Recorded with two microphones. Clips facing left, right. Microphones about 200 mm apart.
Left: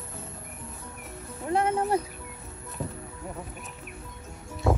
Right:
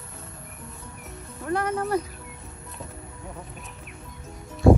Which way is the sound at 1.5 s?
25° left (ahead or behind).